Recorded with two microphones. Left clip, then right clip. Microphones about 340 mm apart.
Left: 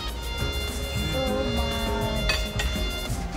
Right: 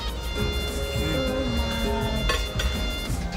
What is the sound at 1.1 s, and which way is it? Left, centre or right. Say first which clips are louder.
Music: left 2 dB; right.